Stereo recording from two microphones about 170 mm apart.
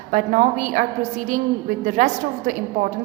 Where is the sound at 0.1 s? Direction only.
50° right (ahead or behind).